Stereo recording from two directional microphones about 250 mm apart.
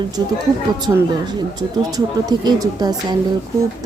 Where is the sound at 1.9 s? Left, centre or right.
Centre.